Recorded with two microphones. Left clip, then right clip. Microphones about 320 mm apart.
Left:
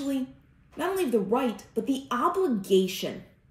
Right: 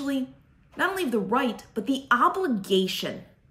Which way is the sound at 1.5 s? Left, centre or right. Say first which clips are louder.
Left 1 dB; centre.